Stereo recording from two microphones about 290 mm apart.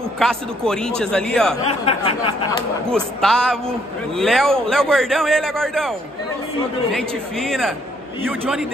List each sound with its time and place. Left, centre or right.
0.2 s a man's voice: centre
1.9 s a sound: centre
2.9 s a man's voice: centre